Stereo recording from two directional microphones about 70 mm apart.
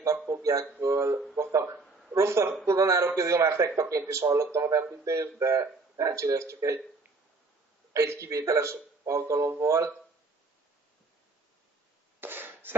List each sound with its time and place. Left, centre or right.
0.3 s a man's voice: right
0.7 s a man's voice: right
7.9 s a man's voice: right
12.2 s cough: right